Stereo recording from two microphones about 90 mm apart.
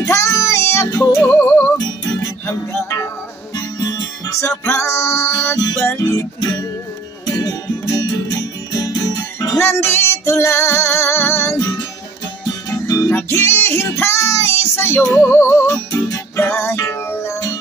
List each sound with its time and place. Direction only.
0.0 s music: 35° left (ahead or behind)
1.2 s music: 25° left (ahead or behind)
4.3 s music: 30° left (ahead or behind)
7.2 s music: 45° left (ahead or behind)
9.6 s music: 30° left (ahead or behind)
12.6 s music: 40° left (ahead or behind)
13.1 s music: 30° left (ahead or behind)
13.9 s child singing: 30° left (ahead or behind)
15.1 s music: 30° left (ahead or behind)
15.6 s music: 40° left (ahead or behind)
16.3 s music: 25° left (ahead or behind)